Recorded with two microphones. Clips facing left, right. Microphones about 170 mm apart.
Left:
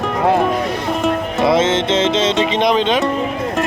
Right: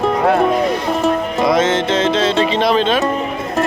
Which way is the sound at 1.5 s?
25° left (ahead or behind).